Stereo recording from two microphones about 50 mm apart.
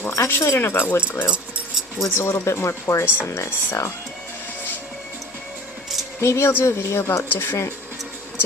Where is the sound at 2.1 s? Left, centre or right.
Left.